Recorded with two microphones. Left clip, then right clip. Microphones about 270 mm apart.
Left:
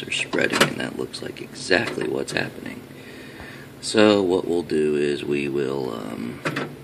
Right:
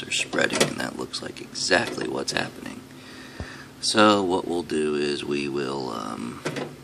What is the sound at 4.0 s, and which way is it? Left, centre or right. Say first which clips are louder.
Speech: left 2 dB; centre.